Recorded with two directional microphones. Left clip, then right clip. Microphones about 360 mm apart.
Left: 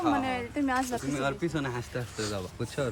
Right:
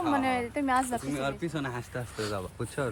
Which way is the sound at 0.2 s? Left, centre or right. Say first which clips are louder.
Right 2 dB; centre.